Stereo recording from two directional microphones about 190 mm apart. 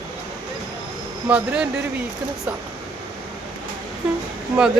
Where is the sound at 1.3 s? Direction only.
5° right (ahead or behind).